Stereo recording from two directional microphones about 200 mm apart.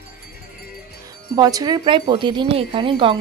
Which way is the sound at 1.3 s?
20° right (ahead or behind).